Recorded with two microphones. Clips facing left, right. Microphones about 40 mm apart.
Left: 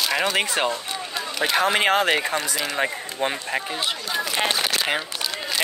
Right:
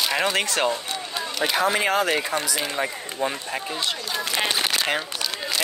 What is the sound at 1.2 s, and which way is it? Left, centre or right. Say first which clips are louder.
Run: left 1 dB; centre.